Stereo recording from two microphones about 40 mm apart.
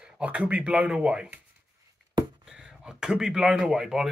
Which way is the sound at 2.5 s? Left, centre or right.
Centre.